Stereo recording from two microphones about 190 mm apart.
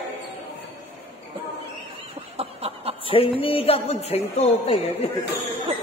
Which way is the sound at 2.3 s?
30° right (ahead or behind).